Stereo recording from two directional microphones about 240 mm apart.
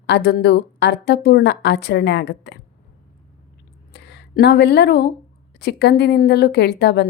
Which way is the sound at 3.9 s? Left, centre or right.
Left.